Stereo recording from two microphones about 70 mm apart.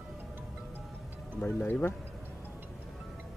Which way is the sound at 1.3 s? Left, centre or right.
Left.